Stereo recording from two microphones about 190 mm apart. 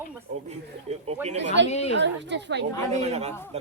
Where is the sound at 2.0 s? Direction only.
65° right (ahead or behind).